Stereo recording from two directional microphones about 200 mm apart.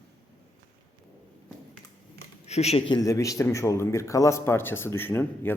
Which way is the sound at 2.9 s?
15° left (ahead or behind).